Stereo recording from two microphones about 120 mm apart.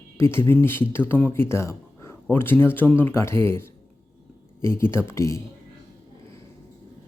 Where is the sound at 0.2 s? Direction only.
20° left (ahead or behind).